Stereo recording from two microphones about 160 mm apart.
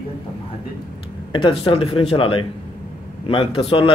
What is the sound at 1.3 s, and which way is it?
A man's voice, 35° left (ahead or behind).